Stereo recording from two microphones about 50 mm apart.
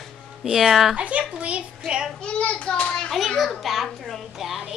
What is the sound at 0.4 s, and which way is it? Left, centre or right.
Speech, centre.